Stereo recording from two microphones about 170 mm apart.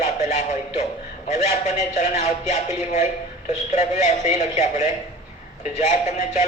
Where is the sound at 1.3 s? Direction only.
45° left (ahead or behind).